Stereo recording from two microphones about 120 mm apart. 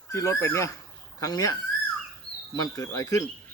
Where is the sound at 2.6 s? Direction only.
30° left (ahead or behind).